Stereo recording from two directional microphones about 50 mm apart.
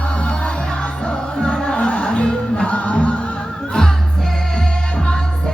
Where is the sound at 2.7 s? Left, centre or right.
Left.